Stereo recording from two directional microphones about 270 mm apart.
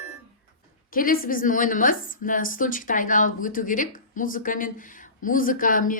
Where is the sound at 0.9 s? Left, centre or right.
Left.